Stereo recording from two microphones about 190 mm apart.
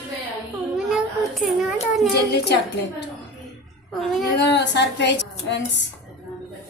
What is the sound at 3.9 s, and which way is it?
Speech, centre (ahead or behind).